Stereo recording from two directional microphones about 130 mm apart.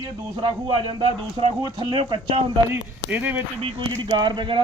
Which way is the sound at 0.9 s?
45° right (ahead or behind).